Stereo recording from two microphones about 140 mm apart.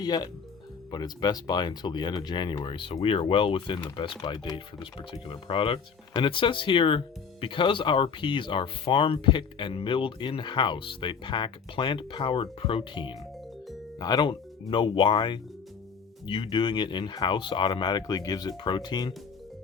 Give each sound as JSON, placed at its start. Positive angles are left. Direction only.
{"t": 0.0, "sound": "speech", "side_deg": 30}